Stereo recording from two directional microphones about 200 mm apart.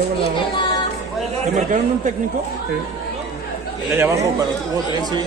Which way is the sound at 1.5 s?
35° right (ahead or behind).